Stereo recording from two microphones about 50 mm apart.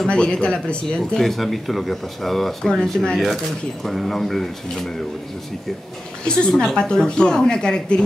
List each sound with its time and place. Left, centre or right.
0.0 s speech: centre
1.1 s speech: centre
3.8 s speech: centre
6.2 s a woman's voice: centre